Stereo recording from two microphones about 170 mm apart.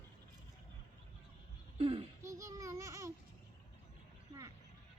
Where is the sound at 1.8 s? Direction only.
35° right (ahead or behind).